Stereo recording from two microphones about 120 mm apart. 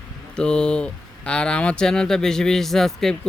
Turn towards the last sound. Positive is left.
turn(degrees=5)  # may be behind; listen again after turning